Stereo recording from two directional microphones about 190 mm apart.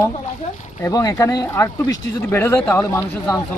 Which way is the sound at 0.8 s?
15° left (ahead or behind).